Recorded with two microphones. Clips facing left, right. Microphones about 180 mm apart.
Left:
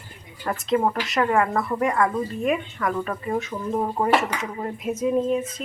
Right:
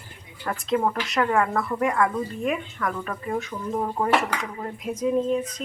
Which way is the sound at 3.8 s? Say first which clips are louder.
Left 1 dB; 15° left (ahead or behind).